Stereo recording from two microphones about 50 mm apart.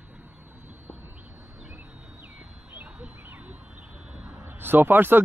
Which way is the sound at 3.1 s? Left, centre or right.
Right.